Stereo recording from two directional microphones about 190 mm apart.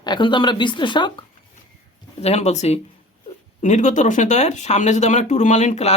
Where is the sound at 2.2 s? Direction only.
35° left (ahead or behind).